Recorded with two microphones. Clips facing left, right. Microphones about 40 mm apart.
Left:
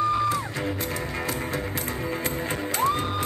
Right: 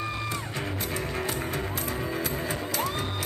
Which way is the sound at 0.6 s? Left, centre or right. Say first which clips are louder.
Left 3 dB; left.